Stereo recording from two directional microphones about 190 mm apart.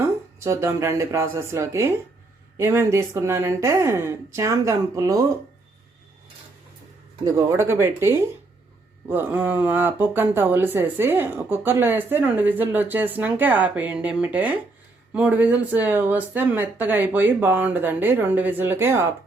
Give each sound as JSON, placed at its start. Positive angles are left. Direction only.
{"t": 0.3, "sound": "speech", "side_deg": -15}
{"t": 7.3, "sound": "speech", "side_deg": -15}